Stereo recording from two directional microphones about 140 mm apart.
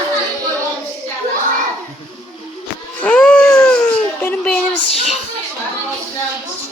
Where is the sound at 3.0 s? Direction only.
10° left (ahead or behind).